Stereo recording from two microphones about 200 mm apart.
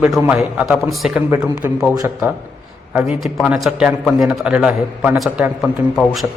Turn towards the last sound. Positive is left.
turn(degrees=0)  # may be behind; listen again after turning